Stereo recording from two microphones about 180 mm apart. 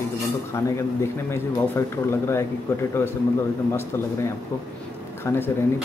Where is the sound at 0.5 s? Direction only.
15° left (ahead or behind).